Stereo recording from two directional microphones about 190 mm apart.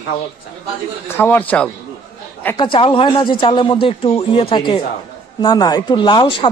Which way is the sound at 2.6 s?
25° left (ahead or behind).